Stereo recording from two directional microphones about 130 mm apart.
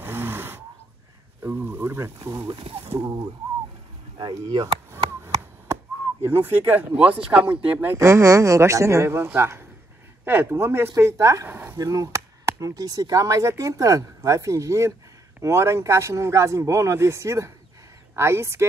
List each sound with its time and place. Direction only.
0.0 s a sound: 15° right (ahead or behind)
1.4 s speech: 15° right (ahead or behind)
2.5 s speech: 45° right (ahead or behind)
3.0 s speech: 30° right (ahead or behind)
4.9 s a sound: 20° right (ahead or behind)
6.2 s speech: 15° right (ahead or behind)
11.8 s speech: 25° right (ahead or behind)